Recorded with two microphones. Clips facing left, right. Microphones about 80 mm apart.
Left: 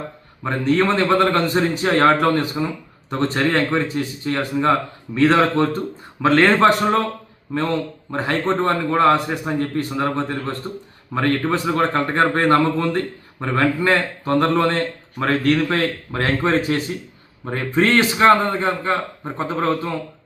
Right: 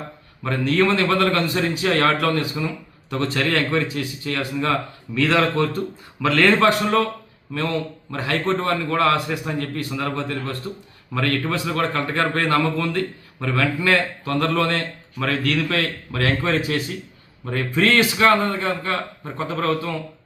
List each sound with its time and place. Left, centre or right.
0.4 s speech: left